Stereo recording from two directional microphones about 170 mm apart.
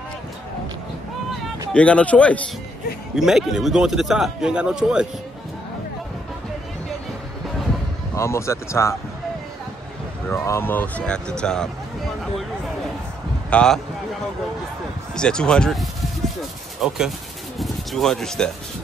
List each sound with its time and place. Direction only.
1.7 s a man's voice: 5° left (ahead or behind)
8.2 s speech: 15° left (ahead or behind)
10.3 s speech: 15° left (ahead or behind)
13.5 s speech: 5° left (ahead or behind)
15.1 s a man's voice: 5° left (ahead or behind)